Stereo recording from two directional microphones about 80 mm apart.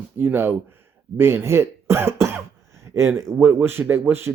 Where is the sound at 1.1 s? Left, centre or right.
Right.